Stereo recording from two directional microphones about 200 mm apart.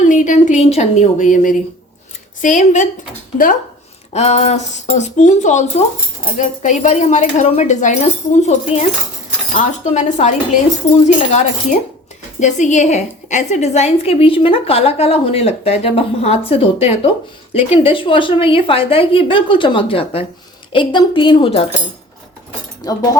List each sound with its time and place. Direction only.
0.0 s a woman's voice: 40° left (ahead or behind)
4.1 s a woman's voice: 30° left (ahead or behind)
22.8 s a woman's voice: 20° left (ahead or behind)